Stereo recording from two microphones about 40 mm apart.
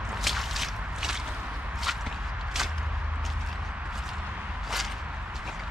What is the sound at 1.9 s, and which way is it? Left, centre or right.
Whip, centre.